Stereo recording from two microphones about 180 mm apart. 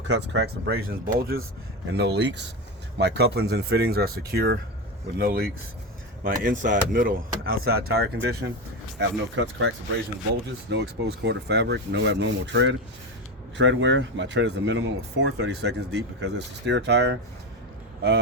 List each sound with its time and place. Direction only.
0.1 s speech: 70° right (ahead or behind); by 1.4 s 55° right (ahead or behind)
1.9 s speech: 70° right (ahead or behind)
9.0 s speech: 90° right
10.7 s speech: 75° right (ahead or behind)